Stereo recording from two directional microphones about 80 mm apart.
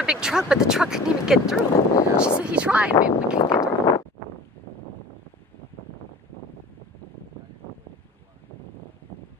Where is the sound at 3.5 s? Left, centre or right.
Left.